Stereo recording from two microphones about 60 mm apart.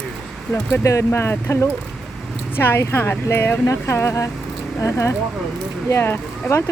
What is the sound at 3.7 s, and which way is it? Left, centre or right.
Speech, left.